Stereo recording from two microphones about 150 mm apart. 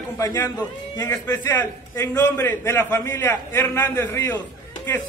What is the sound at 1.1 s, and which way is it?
A man's voice, 10° left (ahead or behind).